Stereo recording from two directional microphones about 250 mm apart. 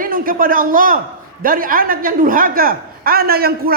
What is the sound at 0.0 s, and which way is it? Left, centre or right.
A man's voice, right.